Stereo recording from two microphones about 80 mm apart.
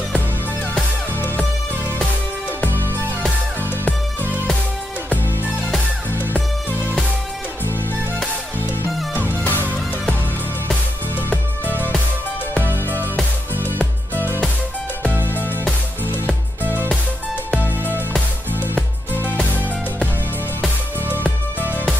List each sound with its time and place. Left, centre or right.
4.2 s music: right
6.1 s music: left
9.3 s music: left
11.1 s music: left
12.5 s music: right
15.2 s music: left
16.6 s music: right
17.5 s music: left